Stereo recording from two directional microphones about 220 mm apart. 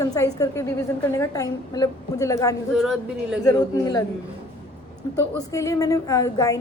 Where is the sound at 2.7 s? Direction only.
Centre (ahead or behind).